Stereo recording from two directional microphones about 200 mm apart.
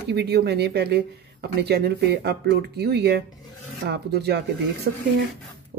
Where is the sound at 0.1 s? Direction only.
55° right (ahead or behind).